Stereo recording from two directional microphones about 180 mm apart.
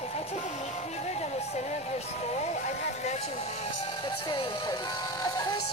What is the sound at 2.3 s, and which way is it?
Speech, 40° left (ahead or behind).